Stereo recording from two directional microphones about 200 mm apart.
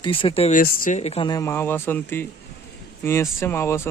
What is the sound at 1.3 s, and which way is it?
Speech, 15° left (ahead or behind).